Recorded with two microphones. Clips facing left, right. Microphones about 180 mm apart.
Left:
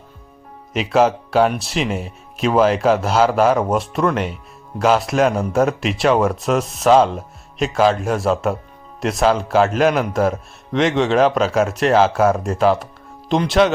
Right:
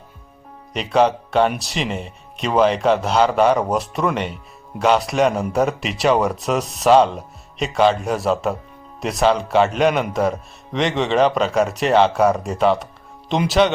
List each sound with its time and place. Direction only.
0.7 s speech: centre (ahead or behind)